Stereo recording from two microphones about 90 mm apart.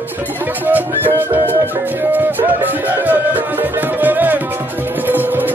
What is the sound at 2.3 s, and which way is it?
Music, 20° right (ahead or behind).